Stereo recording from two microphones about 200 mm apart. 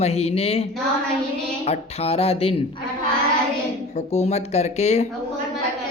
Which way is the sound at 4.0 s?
35° left (ahead or behind).